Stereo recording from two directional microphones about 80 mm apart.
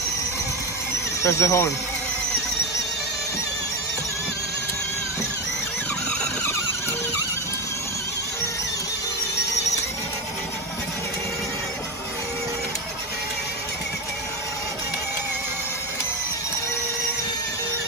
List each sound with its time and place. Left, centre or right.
1.2 s speech: left